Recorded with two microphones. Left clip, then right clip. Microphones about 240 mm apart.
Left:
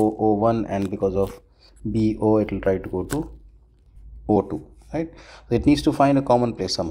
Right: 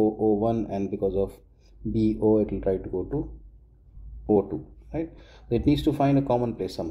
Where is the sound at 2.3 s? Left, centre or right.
Centre.